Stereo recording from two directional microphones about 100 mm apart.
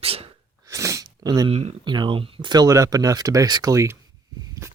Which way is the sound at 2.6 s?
35° right (ahead or behind).